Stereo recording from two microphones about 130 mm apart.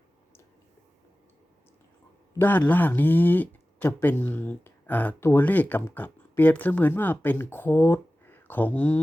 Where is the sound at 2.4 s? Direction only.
15° left (ahead or behind).